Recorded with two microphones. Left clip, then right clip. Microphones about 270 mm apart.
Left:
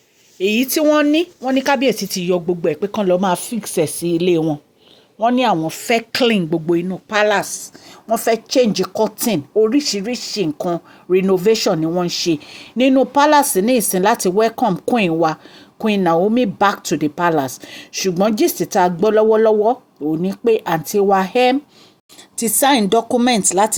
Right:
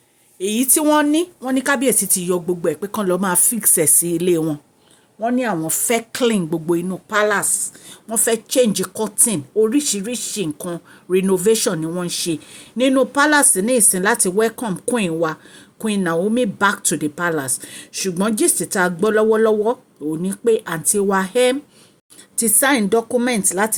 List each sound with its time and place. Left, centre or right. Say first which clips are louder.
0.3 s speech: left 3 dB; centre
5.6 s speech: left 2 dB; centre